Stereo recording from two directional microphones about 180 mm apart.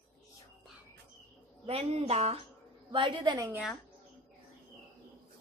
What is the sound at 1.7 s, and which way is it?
A woman's voice, 35° right (ahead or behind).